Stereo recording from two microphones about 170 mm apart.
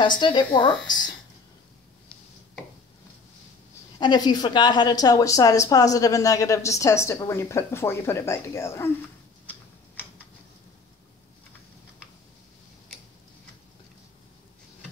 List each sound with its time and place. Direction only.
0.2 s a woman's voice: 30° left (ahead or behind)
4.0 s a woman's voice: 25° left (ahead or behind)